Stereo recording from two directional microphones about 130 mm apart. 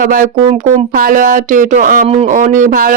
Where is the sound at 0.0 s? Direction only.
90° right.